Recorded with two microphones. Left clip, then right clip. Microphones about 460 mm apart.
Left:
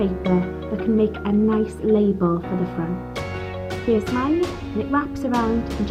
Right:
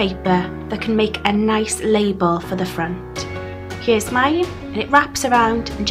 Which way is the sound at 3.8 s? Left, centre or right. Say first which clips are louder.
Right 5 dB; right.